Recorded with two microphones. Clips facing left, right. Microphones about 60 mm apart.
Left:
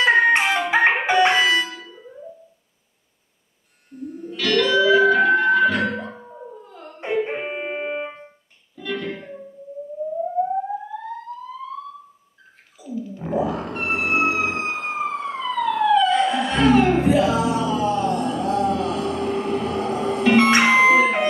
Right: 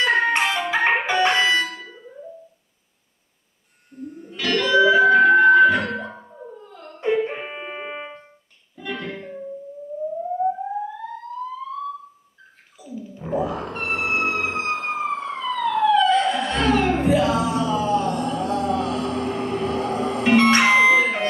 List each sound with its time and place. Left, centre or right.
0.0 s music: centre
4.1 s music: centre
4.7 s a sound: centre
5.0 s music: centre
8.7 s music: centre
11.3 s police car: centre
12.7 s music: centre
20.3 s music: centre